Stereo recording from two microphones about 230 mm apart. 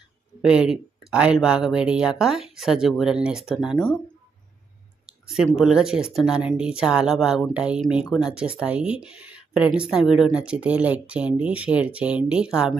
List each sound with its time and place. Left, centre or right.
0.4 s speech: centre
5.0 s speech: centre